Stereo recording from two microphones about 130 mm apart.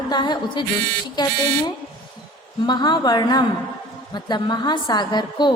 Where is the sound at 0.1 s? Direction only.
35° left (ahead or behind).